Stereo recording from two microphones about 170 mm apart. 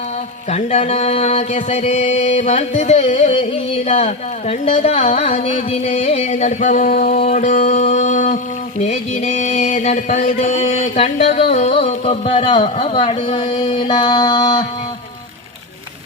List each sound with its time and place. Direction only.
0.5 s music: 40° left (ahead or behind)
5.5 s a sound: 40° left (ahead or behind)
8.8 s music: 40° left (ahead or behind)